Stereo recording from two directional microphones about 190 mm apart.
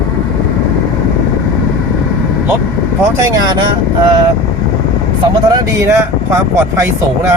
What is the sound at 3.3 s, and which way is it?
Speech, 20° right (ahead or behind).